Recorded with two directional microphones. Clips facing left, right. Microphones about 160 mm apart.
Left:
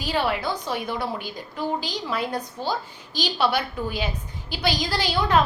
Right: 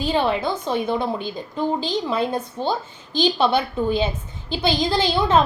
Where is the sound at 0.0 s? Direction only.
25° right (ahead or behind).